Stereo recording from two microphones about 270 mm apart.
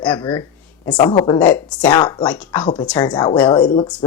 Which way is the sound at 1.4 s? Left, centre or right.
Centre.